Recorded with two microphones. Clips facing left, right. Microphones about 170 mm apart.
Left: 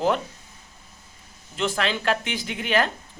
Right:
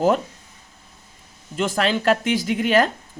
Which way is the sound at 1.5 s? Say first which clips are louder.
Right 4 dB; 45° right (ahead or behind).